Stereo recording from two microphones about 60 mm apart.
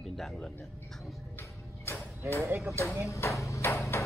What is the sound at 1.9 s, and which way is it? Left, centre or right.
Music, left.